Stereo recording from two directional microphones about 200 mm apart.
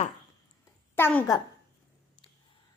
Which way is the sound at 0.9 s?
10° left (ahead or behind).